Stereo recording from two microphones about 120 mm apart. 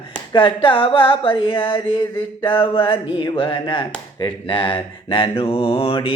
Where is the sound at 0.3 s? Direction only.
45° left (ahead or behind).